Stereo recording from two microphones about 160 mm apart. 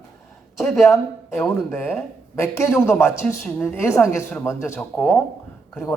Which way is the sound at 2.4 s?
15° left (ahead or behind).